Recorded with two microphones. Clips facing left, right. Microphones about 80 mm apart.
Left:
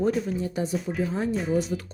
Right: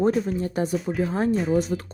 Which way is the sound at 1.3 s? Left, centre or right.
Centre.